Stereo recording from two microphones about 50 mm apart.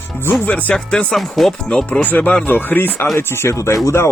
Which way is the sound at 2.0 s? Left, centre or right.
Left.